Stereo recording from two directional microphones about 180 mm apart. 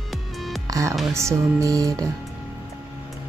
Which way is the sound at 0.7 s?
20° right (ahead or behind).